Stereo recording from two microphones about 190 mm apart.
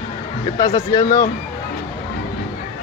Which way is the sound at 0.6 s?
30° left (ahead or behind).